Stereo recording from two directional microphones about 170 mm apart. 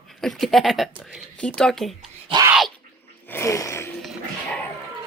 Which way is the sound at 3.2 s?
15° left (ahead or behind).